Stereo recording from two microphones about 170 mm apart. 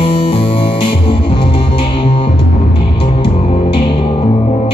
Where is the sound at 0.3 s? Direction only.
35° left (ahead or behind).